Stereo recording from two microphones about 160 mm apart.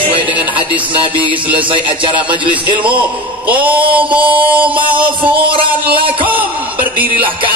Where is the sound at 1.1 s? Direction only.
30° right (ahead or behind).